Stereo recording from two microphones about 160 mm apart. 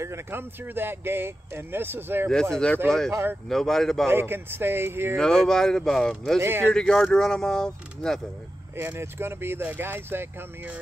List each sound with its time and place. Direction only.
0.0 s speech: 15° right (ahead or behind)
2.5 s speech: 5° left (ahead or behind)
3.1 s speech: 15° right (ahead or behind)
3.4 s speech: 5° left (ahead or behind)
4.1 s speech: 15° right (ahead or behind)
5.1 s speech: 5° left (ahead or behind)
6.4 s speech: 15° right (ahead or behind)
6.7 s speech: 5° left (ahead or behind)
8.7 s speech: 15° right (ahead or behind)